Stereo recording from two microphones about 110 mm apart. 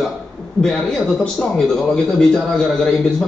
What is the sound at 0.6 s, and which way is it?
Speech, 5° left (ahead or behind).